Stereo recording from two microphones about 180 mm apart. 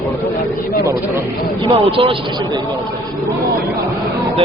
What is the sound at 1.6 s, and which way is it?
Speech, 30° right (ahead or behind).